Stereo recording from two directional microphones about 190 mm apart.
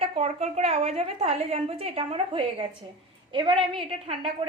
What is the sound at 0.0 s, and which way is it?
A woman's voice, 35° right (ahead or behind).